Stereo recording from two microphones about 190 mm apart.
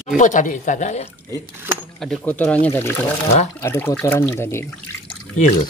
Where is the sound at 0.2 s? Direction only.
40° left (ahead or behind).